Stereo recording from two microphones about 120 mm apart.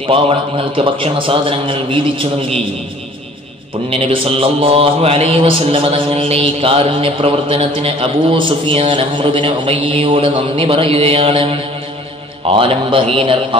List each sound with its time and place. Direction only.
0.0 s a man's voice: 50° right (ahead or behind)
3.9 s a man's voice: 50° right (ahead or behind)